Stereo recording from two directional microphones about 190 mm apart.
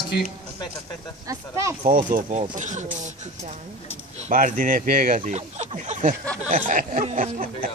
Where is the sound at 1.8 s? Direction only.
45° right (ahead or behind).